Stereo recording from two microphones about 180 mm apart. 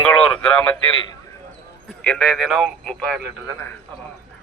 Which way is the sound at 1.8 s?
5° left (ahead or behind).